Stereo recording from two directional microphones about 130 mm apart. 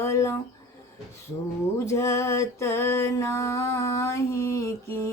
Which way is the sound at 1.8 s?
25° left (ahead or behind).